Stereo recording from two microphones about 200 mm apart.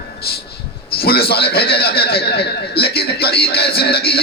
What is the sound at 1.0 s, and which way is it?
Music, 50° left (ahead or behind).